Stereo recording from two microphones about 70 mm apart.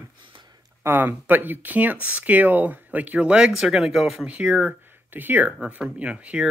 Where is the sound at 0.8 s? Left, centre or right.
Right; by 4.3 s centre.